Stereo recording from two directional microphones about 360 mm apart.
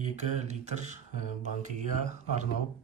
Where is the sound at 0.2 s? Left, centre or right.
Centre.